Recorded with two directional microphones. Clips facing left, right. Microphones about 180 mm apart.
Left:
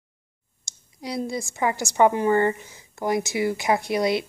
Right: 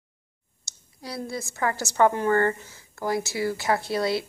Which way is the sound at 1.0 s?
15° left (ahead or behind).